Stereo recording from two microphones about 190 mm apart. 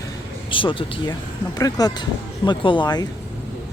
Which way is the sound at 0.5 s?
25° left (ahead or behind).